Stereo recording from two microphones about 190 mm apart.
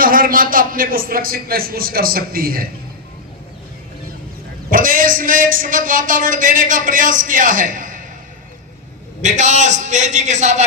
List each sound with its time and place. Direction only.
0.0 s a man's voice: 50° right (ahead or behind)
4.7 s a man's voice: 45° right (ahead or behind)
9.2 s a man's voice: 40° right (ahead or behind)